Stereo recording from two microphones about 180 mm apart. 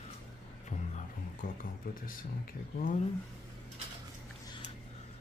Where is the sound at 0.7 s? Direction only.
45° left (ahead or behind).